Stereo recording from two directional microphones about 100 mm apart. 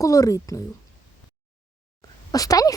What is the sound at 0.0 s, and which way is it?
Speech, 35° left (ahead or behind).